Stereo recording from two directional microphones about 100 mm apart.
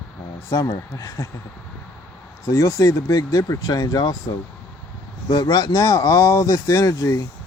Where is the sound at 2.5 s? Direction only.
35° left (ahead or behind).